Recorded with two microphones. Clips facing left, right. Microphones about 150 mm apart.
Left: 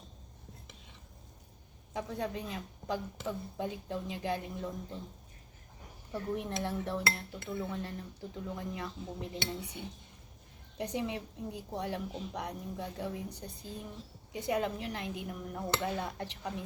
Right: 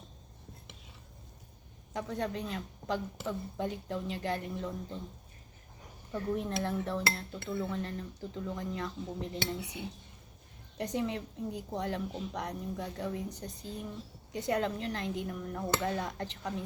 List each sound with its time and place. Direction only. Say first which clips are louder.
1.9 s speech: right 1 dB; 10° left (ahead or behind)
6.1 s speech: right 2 dB; 15° left (ahead or behind)
9.6 s speech: right 2 dB; 10° right (ahead or behind)
10.8 s speech: right 2 dB; 15° left (ahead or behind)
14.3 s speech: right 1 dB; 10° left (ahead or behind)